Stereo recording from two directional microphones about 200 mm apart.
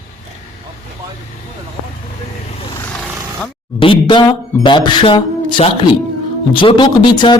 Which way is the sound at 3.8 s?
25° left (ahead or behind).